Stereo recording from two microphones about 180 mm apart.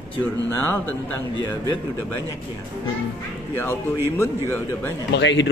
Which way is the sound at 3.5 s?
10° left (ahead or behind).